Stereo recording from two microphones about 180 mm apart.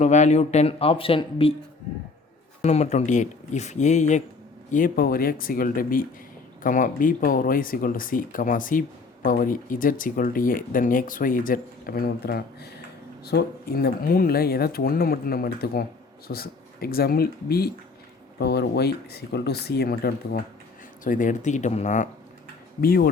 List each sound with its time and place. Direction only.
0.0 s speech: 40° left (ahead or behind)
2.6 s speech: 40° left (ahead or behind); by 20.4 s 60° left (ahead or behind)
21.0 s speech: 45° left (ahead or behind)
22.8 s speech: 55° left (ahead or behind)